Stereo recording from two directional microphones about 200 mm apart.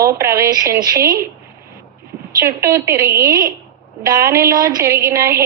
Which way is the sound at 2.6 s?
15° right (ahead or behind).